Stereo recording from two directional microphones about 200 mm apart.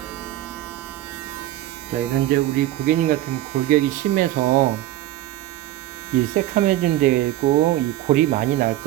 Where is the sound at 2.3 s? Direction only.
40° right (ahead or behind).